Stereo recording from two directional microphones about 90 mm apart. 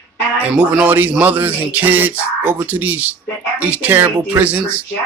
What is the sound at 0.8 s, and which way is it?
Speech, 20° right (ahead or behind).